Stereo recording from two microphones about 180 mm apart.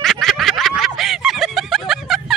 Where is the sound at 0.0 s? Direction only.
Centre (ahead or behind).